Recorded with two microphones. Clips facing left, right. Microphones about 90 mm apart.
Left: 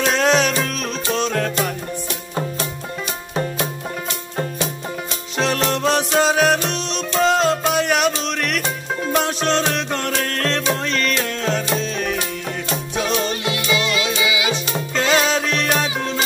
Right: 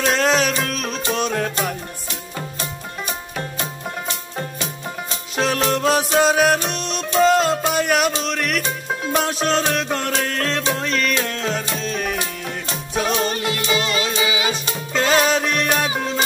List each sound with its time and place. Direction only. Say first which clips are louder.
0.0 s music: left 1 dB; centre (ahead or behind)
5.4 s music: even; centre (ahead or behind)
13.7 s music: even; 40° right (ahead or behind)
14.5 s music: left 2 dB; centre (ahead or behind)